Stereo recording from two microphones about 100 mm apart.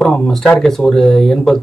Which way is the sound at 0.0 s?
5° left (ahead or behind).